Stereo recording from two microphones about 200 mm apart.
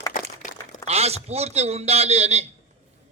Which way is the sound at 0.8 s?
30° right (ahead or behind).